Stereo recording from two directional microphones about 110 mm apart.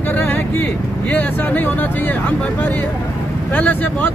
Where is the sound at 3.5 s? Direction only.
15° left (ahead or behind).